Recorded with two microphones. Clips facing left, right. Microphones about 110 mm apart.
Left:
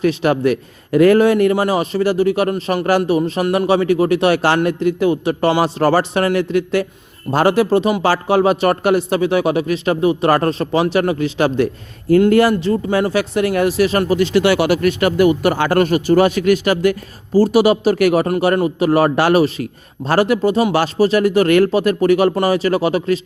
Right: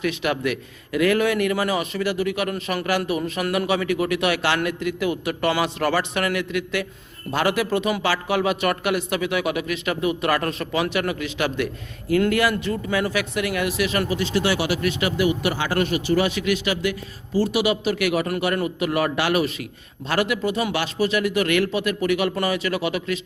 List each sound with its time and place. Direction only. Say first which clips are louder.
0.0 s speech: left 8 dB; 35° left (ahead or behind)
14.2 s speech: left 8 dB; 65° left (ahead or behind); by 23.2 s 35° left (ahead or behind)